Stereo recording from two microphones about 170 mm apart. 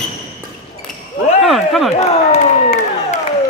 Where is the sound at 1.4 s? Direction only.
Centre (ahead or behind).